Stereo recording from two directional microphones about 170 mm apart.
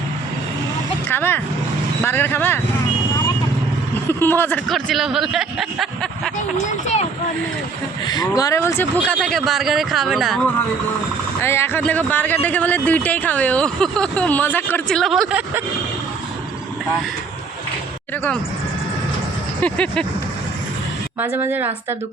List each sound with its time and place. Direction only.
1.1 s speech: 10° left (ahead or behind)
4.2 s speech: 10° left (ahead or behind)
4.7 s speech: centre (ahead or behind)
6.8 s speech: 40° left (ahead or behind)
8.0 s speech: 25° left (ahead or behind)
9.1 s speech: centre (ahead or behind)
11.4 s speech: 15° left (ahead or behind); by 15.6 s 5° right (ahead or behind)
19.6 s speech: 5° left (ahead or behind)
21.2 s a woman's voice: 10° right (ahead or behind)